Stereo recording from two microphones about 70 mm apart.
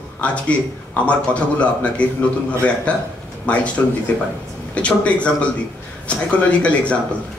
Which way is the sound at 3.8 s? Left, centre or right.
Left.